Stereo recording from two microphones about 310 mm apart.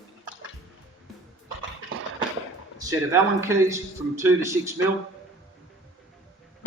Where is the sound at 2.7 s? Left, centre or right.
Centre.